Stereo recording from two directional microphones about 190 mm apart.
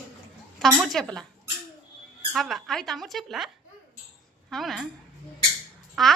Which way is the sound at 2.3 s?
Centre (ahead or behind).